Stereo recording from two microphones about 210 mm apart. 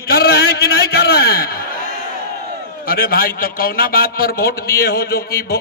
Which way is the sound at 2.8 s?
45° left (ahead or behind).